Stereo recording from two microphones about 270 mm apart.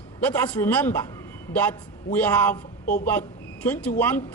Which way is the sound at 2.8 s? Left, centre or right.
Left.